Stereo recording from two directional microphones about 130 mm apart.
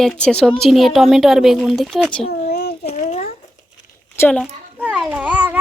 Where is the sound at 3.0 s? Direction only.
80° left.